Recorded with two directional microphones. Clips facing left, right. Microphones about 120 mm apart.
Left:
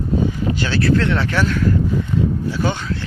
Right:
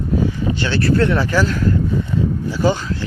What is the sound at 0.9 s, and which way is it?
Speech, 5° right (ahead or behind).